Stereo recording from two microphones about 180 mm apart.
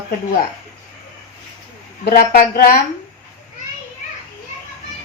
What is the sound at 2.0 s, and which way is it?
Speech, 55° left (ahead or behind).